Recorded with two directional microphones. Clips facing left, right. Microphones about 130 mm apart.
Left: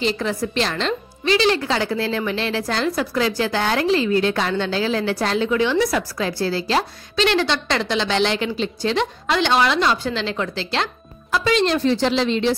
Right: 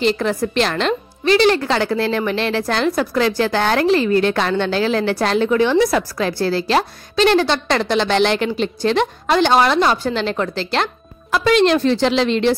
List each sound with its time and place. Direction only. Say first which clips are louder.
0.0 s a woman's voice: right 4 dB; 60° right (ahead or behind)
5.5 s a woman's voice: right 4 dB; 45° right (ahead or behind); by 12.5 s 65° right (ahead or behind)